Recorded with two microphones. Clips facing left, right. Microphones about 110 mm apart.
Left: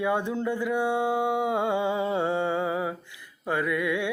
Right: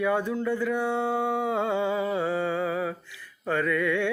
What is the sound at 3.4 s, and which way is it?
Mantra, 15° left (ahead or behind).